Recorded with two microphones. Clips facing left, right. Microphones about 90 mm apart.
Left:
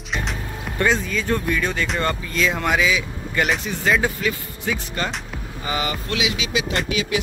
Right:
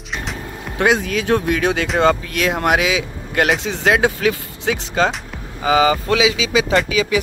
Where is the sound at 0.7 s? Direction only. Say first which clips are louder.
Right 4 dB; 70° right (ahead or behind); by 5.8 s 90° right.